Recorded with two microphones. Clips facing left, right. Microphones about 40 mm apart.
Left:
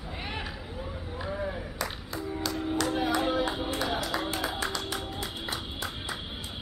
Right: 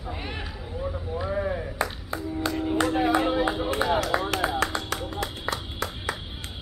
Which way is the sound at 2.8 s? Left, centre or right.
Centre.